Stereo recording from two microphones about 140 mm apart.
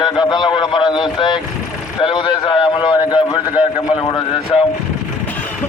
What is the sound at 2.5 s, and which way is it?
Speech, 35° left (ahead or behind).